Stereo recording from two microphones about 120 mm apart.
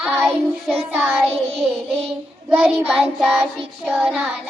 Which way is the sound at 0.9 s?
15° right (ahead or behind).